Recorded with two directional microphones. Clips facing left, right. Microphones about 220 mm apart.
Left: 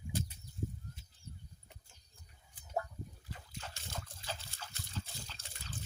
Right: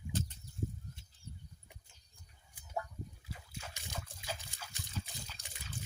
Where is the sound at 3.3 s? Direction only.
10° right (ahead or behind).